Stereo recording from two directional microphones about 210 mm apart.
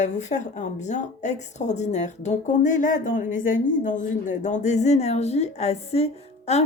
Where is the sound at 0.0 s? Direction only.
35° left (ahead or behind).